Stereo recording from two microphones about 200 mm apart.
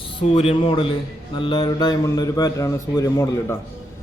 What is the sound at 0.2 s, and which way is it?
A man's voice, 30° left (ahead or behind).